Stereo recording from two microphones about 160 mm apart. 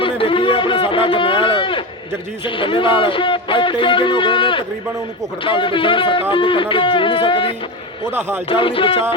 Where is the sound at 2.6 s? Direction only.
30° left (ahead or behind).